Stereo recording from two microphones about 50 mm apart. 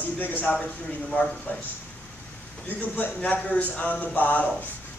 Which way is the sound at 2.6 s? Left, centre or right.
Left.